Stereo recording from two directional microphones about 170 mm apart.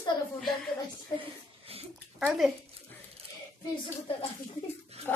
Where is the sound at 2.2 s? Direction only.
Centre (ahead or behind).